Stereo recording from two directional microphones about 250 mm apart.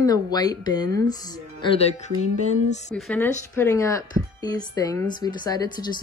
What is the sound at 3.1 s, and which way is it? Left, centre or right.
A woman's voice, centre.